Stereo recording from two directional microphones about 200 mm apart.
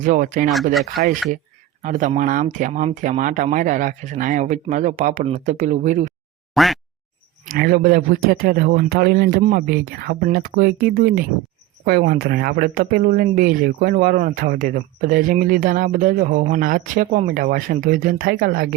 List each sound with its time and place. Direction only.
0.0 s speech: 40° right (ahead or behind)
0.7 s speech: centre (ahead or behind)
1.8 s speech: 40° right (ahead or behind)
6.5 s a sound: centre (ahead or behind)
7.4 s speech: 50° right (ahead or behind)